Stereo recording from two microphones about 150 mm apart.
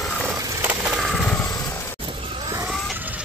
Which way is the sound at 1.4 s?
20° left (ahead or behind).